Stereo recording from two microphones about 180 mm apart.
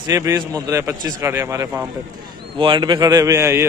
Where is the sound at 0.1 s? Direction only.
15° right (ahead or behind).